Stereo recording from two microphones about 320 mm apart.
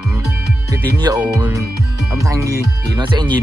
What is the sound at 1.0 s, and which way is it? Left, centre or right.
Speech, centre.